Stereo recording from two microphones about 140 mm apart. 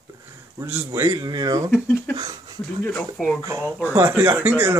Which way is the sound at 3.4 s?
25° right (ahead or behind).